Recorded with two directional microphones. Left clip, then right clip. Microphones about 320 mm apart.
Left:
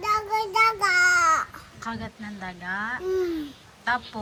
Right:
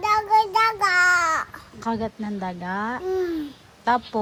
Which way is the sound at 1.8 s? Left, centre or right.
Centre.